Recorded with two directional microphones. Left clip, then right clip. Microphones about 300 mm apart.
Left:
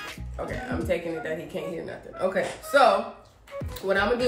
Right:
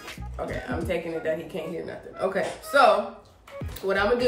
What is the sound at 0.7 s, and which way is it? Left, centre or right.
Speech, centre.